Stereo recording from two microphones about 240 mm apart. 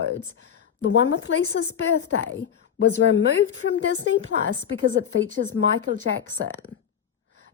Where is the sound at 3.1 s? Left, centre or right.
Left.